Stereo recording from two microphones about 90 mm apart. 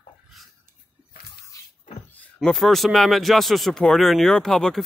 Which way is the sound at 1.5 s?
35° left (ahead or behind).